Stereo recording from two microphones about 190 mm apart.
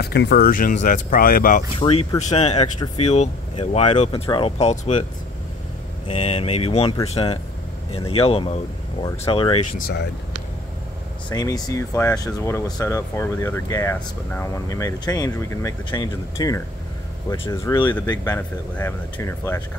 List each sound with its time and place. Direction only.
0.0 s speech: 60° left (ahead or behind)
1.8 s speech: 30° left (ahead or behind)
4.1 s speech: 25° left (ahead or behind)
6.0 s speech: 30° left (ahead or behind)
9.0 s speech: 15° left (ahead or behind)
9.3 s speech: 30° left (ahead or behind)
9.8 s speech: 55° left (ahead or behind)
11.2 s speech: 20° left (ahead or behind)